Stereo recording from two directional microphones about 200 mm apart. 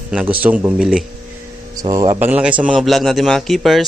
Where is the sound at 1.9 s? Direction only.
25° right (ahead or behind).